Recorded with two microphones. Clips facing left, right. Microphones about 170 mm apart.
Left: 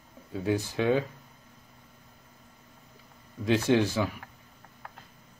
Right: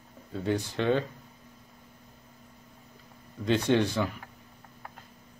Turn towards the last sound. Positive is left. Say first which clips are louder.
# left 1 dB
turn(degrees=5)  # may be behind; listen again after turning